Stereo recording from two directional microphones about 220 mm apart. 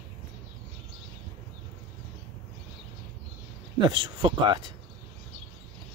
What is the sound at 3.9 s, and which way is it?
Speech, 20° right (ahead or behind).